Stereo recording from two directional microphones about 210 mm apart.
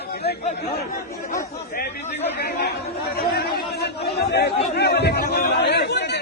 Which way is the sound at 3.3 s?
50° left (ahead or behind).